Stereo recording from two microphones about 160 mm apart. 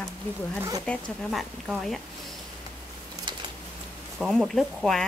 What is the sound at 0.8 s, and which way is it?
Speech, 5° left (ahead or behind).